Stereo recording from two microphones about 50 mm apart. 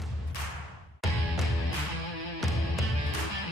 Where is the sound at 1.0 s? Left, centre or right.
Centre.